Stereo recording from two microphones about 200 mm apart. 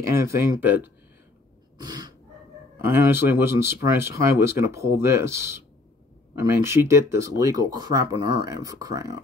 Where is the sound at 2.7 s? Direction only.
15° right (ahead or behind).